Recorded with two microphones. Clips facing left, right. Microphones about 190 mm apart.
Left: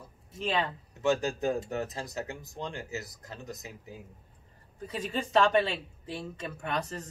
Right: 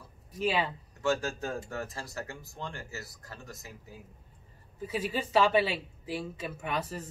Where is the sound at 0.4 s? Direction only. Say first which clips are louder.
Right 1 dB; 5° right (ahead or behind).